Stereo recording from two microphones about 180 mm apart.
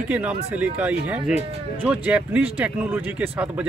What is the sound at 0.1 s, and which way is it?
Speech, 10° right (ahead or behind).